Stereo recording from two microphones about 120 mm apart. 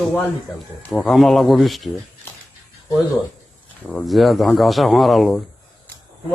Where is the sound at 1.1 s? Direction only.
Centre (ahead or behind).